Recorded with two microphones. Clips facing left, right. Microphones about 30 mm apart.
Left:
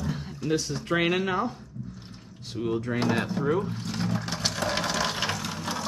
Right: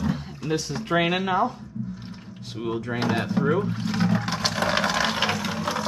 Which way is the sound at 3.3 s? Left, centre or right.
Centre.